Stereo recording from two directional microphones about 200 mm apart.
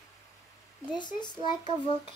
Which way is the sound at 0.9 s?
20° left (ahead or behind).